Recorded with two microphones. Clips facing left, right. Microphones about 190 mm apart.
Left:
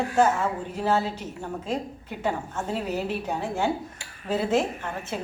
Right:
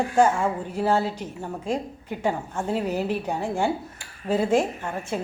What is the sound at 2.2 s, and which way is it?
A woman's voice, 10° right (ahead or behind).